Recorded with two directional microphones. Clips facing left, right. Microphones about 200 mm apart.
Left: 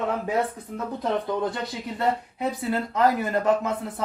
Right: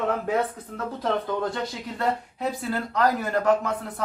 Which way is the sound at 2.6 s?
20° left (ahead or behind).